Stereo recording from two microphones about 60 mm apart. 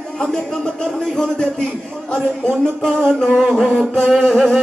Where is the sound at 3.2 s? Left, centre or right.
Centre.